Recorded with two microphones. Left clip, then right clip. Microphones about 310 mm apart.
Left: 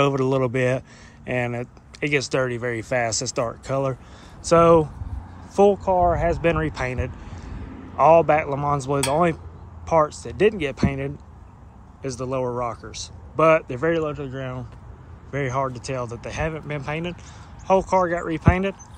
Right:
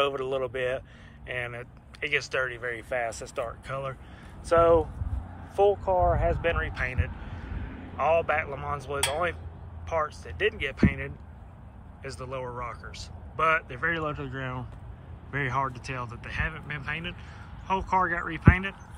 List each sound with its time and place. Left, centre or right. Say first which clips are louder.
0.0 s speech: left 7 dB; centre
2.0 s speech: left 5 dB; centre
6.1 s speech: left 6 dB; centre